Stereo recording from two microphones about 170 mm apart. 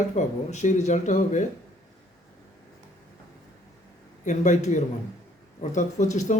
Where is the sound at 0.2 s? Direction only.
45° left (ahead or behind).